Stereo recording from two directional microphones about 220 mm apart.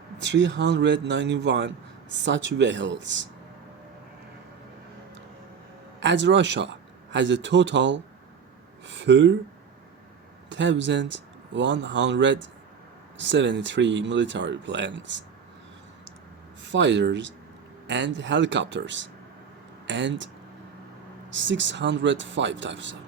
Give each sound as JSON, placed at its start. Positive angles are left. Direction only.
{"t": 0.2, "sound": "a man's voice", "side_deg": -55}
{"t": 6.0, "sound": "a man's voice", "side_deg": -55}
{"t": 10.5, "sound": "speech", "side_deg": -55}
{"t": 16.6, "sound": "speech", "side_deg": -55}